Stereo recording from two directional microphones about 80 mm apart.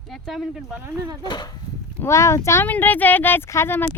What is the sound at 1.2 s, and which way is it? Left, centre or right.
Speech, left.